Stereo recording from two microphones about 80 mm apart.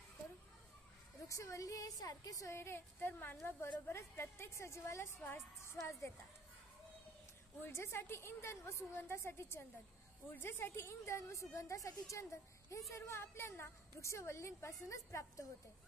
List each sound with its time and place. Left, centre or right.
1.3 s a woman's voice: left
3.9 s a woman's voice: left
5.2 s a woman's voice: left
5.8 s a woman's voice: left
7.6 s a woman's voice: left